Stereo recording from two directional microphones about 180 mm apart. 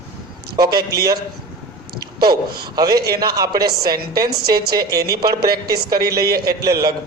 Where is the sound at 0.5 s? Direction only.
60° right (ahead or behind).